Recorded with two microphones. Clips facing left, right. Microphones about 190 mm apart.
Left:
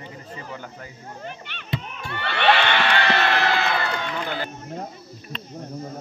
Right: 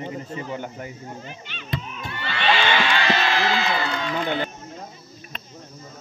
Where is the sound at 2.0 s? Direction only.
60° left (ahead or behind).